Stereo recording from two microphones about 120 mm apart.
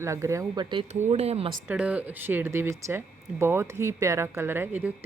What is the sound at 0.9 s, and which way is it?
Speech, 65° right (ahead or behind).